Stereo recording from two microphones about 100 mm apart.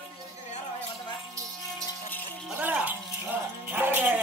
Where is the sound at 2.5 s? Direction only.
15° right (ahead or behind).